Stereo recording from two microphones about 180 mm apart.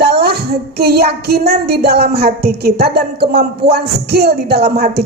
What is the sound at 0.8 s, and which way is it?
Speech, 60° right (ahead or behind).